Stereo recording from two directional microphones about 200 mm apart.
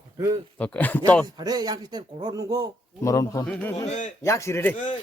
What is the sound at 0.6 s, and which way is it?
Speech, 10° left (ahead or behind).